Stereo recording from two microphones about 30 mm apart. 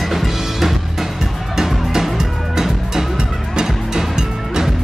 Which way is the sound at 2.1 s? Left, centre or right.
Centre.